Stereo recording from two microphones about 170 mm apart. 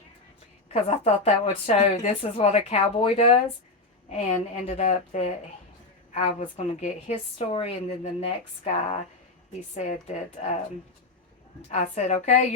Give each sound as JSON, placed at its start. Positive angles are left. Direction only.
{"t": 0.7, "sound": "a woman's voice", "side_deg": 40}
{"t": 4.6, "sound": "a woman's voice", "side_deg": 40}
{"t": 11.7, "sound": "speech", "side_deg": 45}